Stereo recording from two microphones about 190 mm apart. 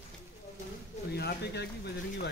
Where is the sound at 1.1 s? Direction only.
60° left (ahead or behind).